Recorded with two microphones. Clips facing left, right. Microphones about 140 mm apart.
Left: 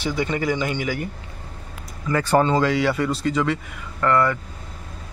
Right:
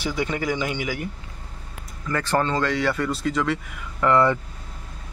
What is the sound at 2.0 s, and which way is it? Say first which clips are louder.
Speech: left 4 dB; 10° left (ahead or behind).